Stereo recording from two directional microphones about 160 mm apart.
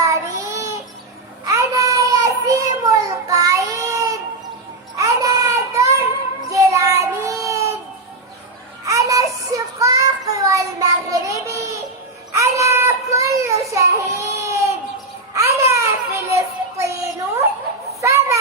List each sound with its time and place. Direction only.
0.0 s child singing: 20° right (ahead or behind)
8.9 s child singing: 20° right (ahead or behind)
11.4 s a sound: 20° right (ahead or behind)
12.3 s child singing: 20° right (ahead or behind)
15.4 s a sound: 15° right (ahead or behind)
18.0 s children playing: 20° right (ahead or behind)